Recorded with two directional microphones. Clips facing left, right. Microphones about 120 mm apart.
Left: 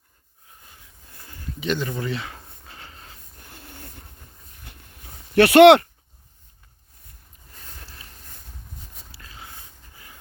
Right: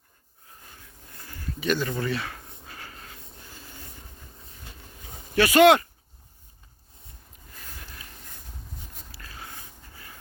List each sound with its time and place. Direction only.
1.1 s a sound: 20° left (ahead or behind)
3.4 s train: 60° left (ahead or behind)
5.3 s speech: 65° left (ahead or behind)
7.8 s vehicle: 30° left (ahead or behind)
9.1 s a sound: 20° left (ahead or behind)
9.9 s dog: 20° left (ahead or behind)